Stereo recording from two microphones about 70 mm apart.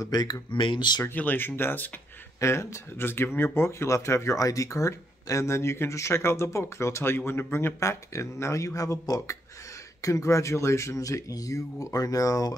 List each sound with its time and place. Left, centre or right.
0.0 s speech: left
1.1 s speech: left
2.4 s speech: left
7.8 s speech: left